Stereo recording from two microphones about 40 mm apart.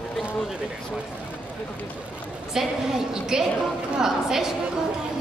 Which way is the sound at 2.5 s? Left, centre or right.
Centre.